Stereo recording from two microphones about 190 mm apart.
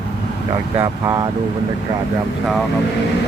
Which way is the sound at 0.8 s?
20° right (ahead or behind).